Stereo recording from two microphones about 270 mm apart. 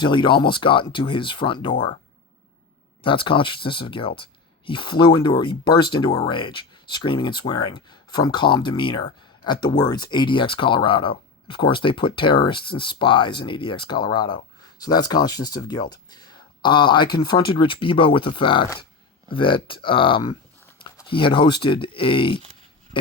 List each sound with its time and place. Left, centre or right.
0.0 s speech: centre
3.0 s speech: centre